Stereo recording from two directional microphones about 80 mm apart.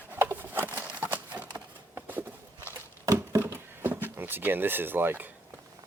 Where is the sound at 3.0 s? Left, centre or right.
Right.